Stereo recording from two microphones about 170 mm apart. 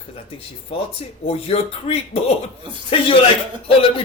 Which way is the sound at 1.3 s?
35° left (ahead or behind).